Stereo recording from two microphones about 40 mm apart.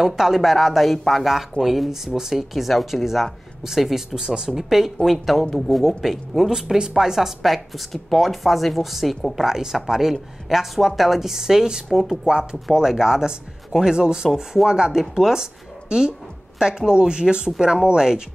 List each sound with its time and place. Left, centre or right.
0.0 s a woman's voice: centre
3.6 s a woman's voice: centre
11.9 s a woman's voice: centre
12.9 s speech: centre
14.3 s a woman's voice: centre